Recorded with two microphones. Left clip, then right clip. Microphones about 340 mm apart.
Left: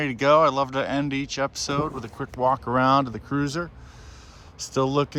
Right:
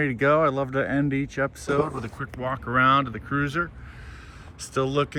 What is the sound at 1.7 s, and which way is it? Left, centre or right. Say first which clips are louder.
Speech: right 2 dB; centre.